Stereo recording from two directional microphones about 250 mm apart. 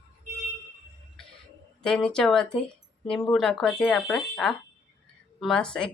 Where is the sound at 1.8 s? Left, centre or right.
Centre.